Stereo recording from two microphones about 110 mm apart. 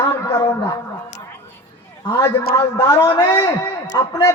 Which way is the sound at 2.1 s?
30° left (ahead or behind).